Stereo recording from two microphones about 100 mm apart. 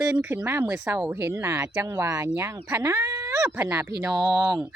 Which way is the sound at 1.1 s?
25° right (ahead or behind).